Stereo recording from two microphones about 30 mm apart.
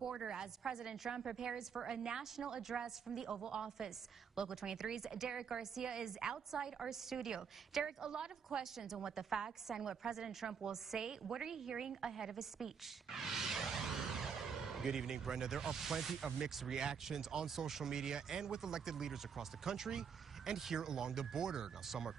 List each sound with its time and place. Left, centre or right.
0.0 s speech: right
2.7 s speech: centre
8.7 s speech: centre
21.8 s speech: centre